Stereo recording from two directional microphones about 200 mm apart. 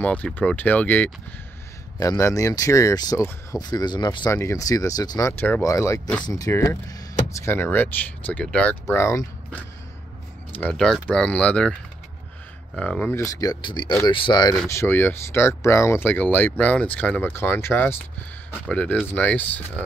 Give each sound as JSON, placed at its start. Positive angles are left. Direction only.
{"t": 0.0, "sound": "speech", "side_deg": 10}
{"t": 12.7, "sound": "speech", "side_deg": 5}
{"t": 13.2, "sound": "speech", "side_deg": 15}